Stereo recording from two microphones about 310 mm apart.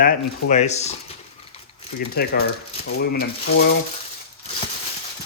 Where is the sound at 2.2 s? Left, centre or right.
Left.